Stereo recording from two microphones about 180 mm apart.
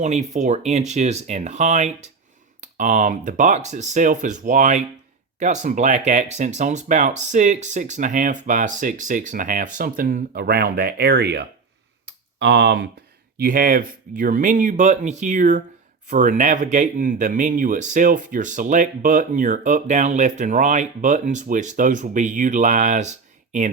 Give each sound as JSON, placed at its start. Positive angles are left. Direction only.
{"t": 0.0, "sound": "speech", "side_deg": -40}
{"t": 12.0, "sound": "tick", "side_deg": -75}
{"t": 13.4, "sound": "speech", "side_deg": -55}